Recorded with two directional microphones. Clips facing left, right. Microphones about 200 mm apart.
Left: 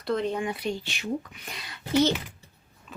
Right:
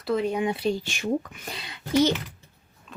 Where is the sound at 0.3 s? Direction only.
25° right (ahead or behind).